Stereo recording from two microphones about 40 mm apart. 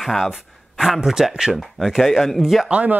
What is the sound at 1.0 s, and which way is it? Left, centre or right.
Speech, centre.